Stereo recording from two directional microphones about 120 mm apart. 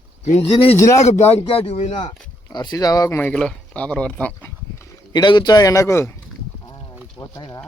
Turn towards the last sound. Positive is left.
turn(degrees=20)  # may be behind; listen again after turning